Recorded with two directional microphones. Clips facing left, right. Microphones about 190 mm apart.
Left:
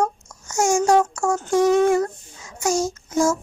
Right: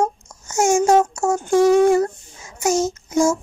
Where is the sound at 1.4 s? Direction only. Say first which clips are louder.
Right 3 dB; 10° right (ahead or behind).